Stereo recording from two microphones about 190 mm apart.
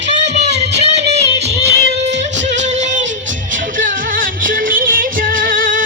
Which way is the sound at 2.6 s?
40° right (ahead or behind).